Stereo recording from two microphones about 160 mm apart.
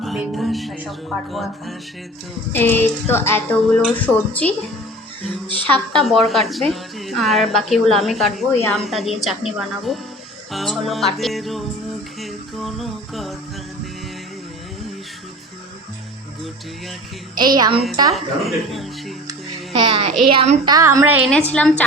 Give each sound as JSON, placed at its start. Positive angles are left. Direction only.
{"t": 0.0, "sound": "a woman's voice", "side_deg": 0}
{"t": 2.5, "sound": "music", "side_deg": 10}
{"t": 5.7, "sound": "a woman's voice", "side_deg": 5}
{"t": 12.2, "sound": "music", "side_deg": 0}
{"t": 17.3, "sound": "a woman's voice", "side_deg": -25}
{"t": 18.1, "sound": "a woman's voice", "side_deg": 0}
{"t": 19.7, "sound": "a child's voice", "side_deg": -35}
{"t": 20.7, "sound": "a woman's voice", "side_deg": -25}
{"t": 21.2, "sound": "music", "side_deg": 5}